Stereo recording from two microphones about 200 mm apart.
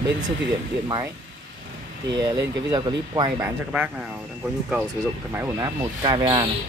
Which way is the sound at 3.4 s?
10° right (ahead or behind).